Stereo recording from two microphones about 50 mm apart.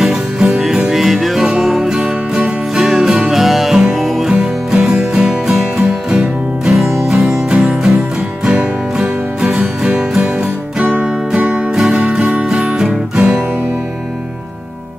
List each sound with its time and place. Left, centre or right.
0.0 s music: centre
4.3 s music: centre